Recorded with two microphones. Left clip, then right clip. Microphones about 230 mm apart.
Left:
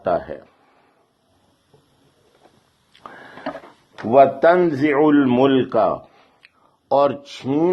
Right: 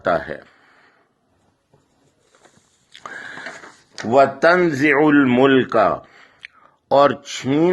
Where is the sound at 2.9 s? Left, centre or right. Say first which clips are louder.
Right 6 dB; right.